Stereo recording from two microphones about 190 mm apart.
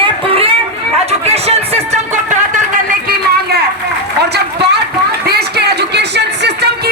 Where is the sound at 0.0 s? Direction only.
30° right (ahead or behind).